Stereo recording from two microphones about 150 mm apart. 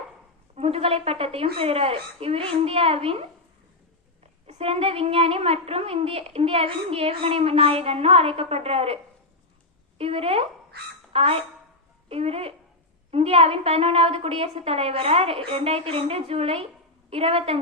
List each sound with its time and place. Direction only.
0.5 s a woman's voice: 40° right (ahead or behind)
4.4 s a woman's voice: 45° right (ahead or behind)
10.0 s a woman's voice: 40° right (ahead or behind)